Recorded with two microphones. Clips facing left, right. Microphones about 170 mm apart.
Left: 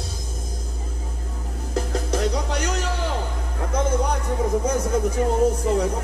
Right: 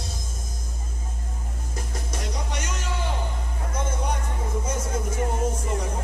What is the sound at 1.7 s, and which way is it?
Music, 65° left (ahead or behind).